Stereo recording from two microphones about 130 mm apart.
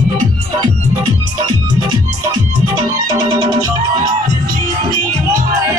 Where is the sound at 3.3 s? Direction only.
30° right (ahead or behind).